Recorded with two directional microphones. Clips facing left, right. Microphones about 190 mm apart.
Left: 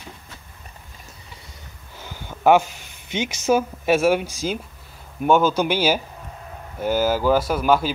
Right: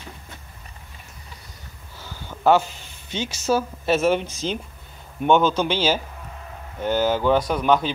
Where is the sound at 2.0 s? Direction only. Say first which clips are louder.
Left 1 dB; 15° left (ahead or behind).